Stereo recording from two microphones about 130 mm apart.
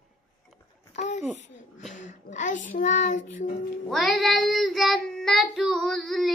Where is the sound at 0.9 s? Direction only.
70° left (ahead or behind).